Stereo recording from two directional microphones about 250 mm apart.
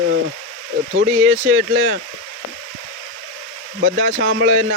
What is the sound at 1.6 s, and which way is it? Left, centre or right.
Speech, right.